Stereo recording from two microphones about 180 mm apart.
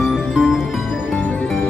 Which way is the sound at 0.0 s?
Centre (ahead or behind).